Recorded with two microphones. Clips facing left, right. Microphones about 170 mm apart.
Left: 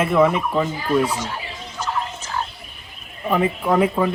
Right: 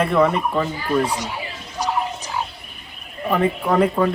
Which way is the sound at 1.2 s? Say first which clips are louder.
Even; 15° right (ahead or behind).